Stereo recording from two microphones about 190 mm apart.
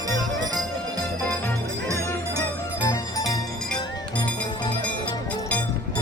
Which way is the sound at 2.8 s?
20° left (ahead or behind).